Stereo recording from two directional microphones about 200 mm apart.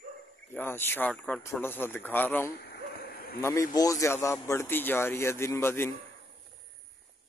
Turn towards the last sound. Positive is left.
turn(degrees=10)  # may be behind; listen again after turning